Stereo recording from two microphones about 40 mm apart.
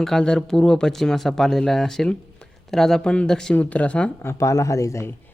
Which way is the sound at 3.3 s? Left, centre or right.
Centre.